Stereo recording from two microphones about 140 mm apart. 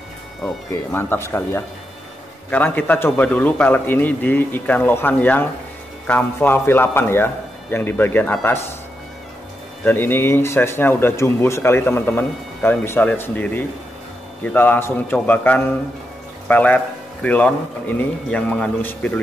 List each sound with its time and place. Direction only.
0.9 s speech: 15° left (ahead or behind)
9.8 s speech: 15° left (ahead or behind)